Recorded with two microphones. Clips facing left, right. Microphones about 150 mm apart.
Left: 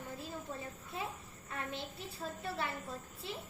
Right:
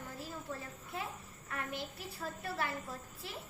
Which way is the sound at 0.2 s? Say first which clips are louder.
Even; 20° left (ahead or behind).